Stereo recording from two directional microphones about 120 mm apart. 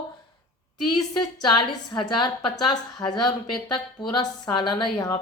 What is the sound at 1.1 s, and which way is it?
A woman's voice, 40° left (ahead or behind).